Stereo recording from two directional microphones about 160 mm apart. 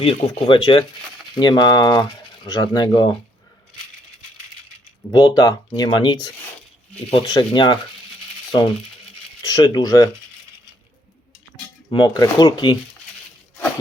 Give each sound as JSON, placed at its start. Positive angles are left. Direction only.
{"t": 0.0, "sound": "speech", "side_deg": 35}
{"t": 5.1, "sound": "speech", "side_deg": 25}
{"t": 9.4, "sound": "speech", "side_deg": 25}
{"t": 11.9, "sound": "speech", "side_deg": 25}